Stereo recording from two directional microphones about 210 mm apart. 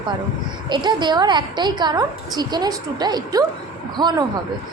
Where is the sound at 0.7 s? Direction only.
20° right (ahead or behind).